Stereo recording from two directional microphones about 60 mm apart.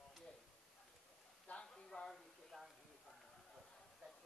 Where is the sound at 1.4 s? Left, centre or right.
Centre.